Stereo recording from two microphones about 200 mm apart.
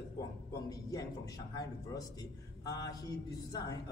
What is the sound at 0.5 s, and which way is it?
A man's voice, 15° left (ahead or behind).